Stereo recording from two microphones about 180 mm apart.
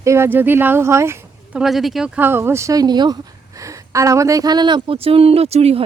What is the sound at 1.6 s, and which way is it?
Speech, centre (ahead or behind).